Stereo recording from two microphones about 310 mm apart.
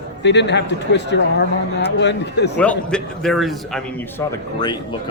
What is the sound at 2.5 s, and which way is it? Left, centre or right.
A man's voice, centre.